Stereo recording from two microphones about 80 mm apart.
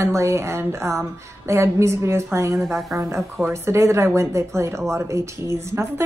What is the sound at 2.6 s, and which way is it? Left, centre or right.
Speech, centre.